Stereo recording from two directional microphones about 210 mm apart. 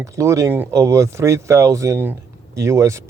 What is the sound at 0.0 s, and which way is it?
Speech, 15° right (ahead or behind).